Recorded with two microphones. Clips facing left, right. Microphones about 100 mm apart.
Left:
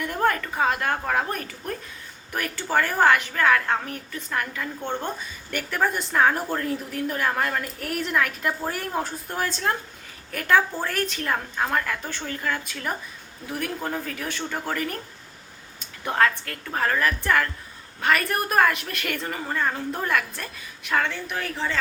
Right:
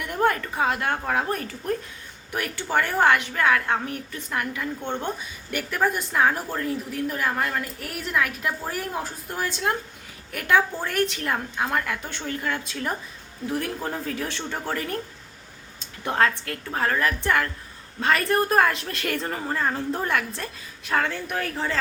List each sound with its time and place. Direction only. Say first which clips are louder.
0.2 s a sound: right 1 dB; 20° right (ahead or behind)
0.6 s a woman's voice: left 1 dB; 20° right (ahead or behind)
10.8 s a woman's voice: right 2 dB; 20° right (ahead or behind); by 21.8 s 45° right (ahead or behind)